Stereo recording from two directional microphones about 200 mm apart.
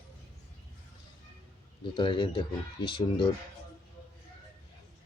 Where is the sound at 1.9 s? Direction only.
25° left (ahead or behind).